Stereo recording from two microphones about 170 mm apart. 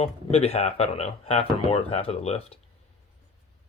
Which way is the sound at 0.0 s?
35° left (ahead or behind).